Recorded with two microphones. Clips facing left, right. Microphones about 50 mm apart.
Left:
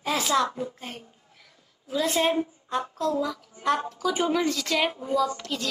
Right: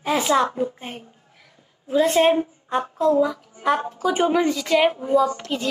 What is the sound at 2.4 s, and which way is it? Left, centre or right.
A woman's voice, right.